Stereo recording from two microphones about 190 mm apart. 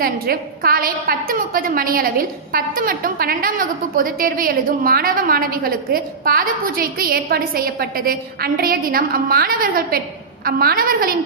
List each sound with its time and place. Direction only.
0.0 s a woman's voice: 50° right (ahead or behind)